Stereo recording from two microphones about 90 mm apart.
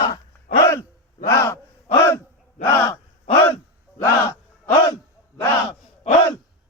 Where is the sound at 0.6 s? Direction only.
35° left (ahead or behind).